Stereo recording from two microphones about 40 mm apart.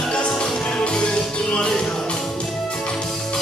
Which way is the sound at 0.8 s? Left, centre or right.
Left.